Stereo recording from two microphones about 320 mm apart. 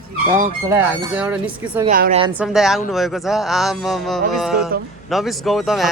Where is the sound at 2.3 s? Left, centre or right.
Centre.